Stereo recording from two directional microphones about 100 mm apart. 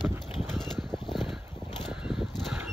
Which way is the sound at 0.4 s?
Centre (ahead or behind).